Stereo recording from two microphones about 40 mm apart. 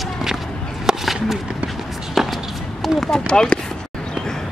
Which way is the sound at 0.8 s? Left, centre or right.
Centre.